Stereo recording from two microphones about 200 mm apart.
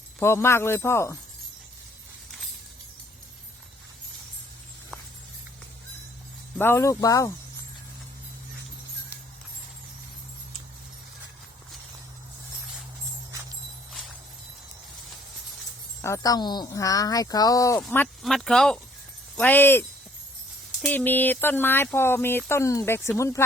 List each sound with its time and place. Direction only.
0.2 s speech: 10° left (ahead or behind)
6.6 s speech: 10° left (ahead or behind)
16.0 s speech: 15° left (ahead or behind)
17.8 s speech: 5° left (ahead or behind)
20.8 s speech: 10° left (ahead or behind)